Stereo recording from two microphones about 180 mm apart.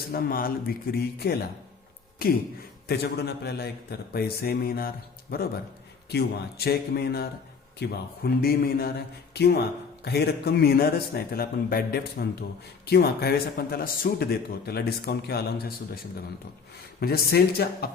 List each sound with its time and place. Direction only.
0.0 s speech: 55° left (ahead or behind)
17.0 s speech: 60° left (ahead or behind)